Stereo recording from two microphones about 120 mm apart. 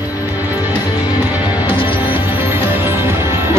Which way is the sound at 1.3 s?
10° right (ahead or behind).